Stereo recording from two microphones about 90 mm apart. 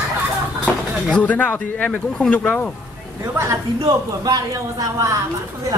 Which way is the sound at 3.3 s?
30° right (ahead or behind).